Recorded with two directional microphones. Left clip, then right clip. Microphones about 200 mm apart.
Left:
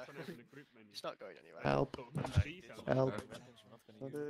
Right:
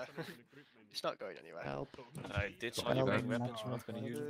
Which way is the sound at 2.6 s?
90° right.